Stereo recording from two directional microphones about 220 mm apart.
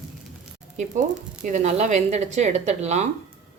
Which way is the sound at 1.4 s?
35° right (ahead or behind).